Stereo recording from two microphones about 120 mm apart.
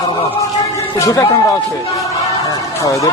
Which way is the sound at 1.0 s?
30° left (ahead or behind).